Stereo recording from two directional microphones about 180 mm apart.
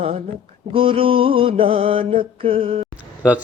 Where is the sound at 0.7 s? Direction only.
30° right (ahead or behind).